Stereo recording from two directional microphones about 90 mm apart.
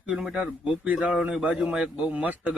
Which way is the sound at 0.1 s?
5° right (ahead or behind).